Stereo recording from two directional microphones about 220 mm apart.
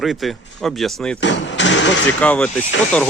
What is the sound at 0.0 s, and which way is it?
Speech, centre (ahead or behind).